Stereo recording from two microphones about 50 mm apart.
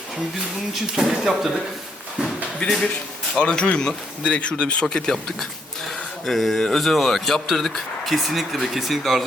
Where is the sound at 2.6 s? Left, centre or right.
Left.